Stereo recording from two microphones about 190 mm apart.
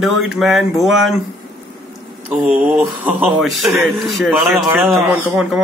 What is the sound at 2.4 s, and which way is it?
Mantra, 10° right (ahead or behind).